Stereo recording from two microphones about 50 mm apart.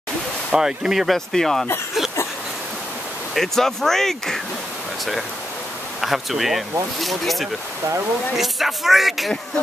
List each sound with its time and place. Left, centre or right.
0.5 s speech: centre
1.3 s speech: centre
3.3 s speech: centre
5.9 s speech: centre